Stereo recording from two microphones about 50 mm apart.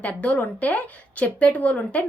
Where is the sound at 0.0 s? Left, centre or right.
Left.